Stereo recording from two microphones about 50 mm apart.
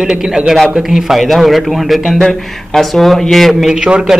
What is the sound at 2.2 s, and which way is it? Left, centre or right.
Speech, centre.